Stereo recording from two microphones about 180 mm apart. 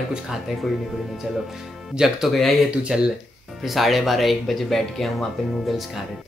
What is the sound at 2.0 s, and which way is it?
Speech, centre (ahead or behind).